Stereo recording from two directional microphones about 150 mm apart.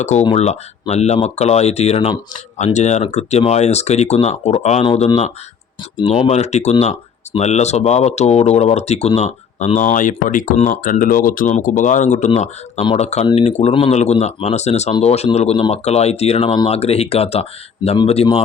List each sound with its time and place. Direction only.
0.0 s speech: 50° left (ahead or behind)